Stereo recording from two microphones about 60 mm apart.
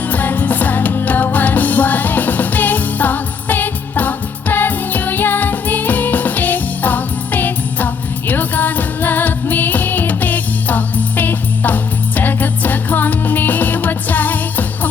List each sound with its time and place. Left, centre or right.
0.1 s music: left